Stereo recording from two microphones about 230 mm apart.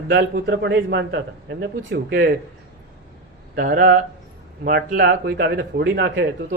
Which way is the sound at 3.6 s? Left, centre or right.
Right.